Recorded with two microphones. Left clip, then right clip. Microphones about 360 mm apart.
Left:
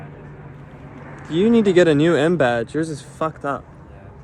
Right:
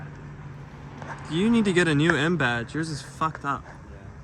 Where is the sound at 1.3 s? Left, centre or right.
Centre.